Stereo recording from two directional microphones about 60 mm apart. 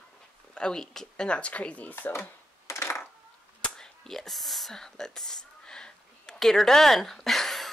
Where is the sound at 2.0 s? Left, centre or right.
Left.